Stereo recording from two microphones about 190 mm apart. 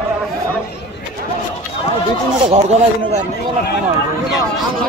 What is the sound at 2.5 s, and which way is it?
Speech, 35° right (ahead or behind).